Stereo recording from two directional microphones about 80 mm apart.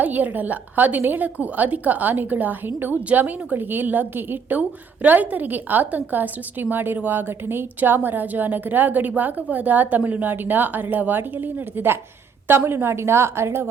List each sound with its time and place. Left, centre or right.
0.0 s a woman's voice: right